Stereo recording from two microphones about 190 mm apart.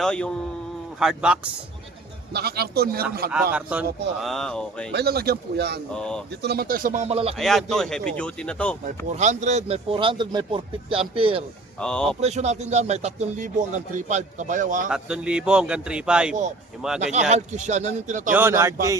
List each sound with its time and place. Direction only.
0.0 s a man's voice: 5° left (ahead or behind)
2.3 s speech: 55° right (ahead or behind)
3.5 s a man's voice: 5° right (ahead or behind)
4.9 s speech: 55° right (ahead or behind)
5.9 s a man's voice: 5° left (ahead or behind)
6.4 s speech: 55° right (ahead or behind); by 7.3 s 30° right (ahead or behind)
7.3 s a man's voice: centre (ahead or behind)
9.1 s speech: 40° right (ahead or behind)
11.8 s a man's voice: 5° left (ahead or behind)
12.2 s speech: 35° right (ahead or behind)
14.8 s a man's voice: 5° right (ahead or behind)
17.1 s speech: 35° right (ahead or behind)
18.3 s speech: 10° right (ahead or behind)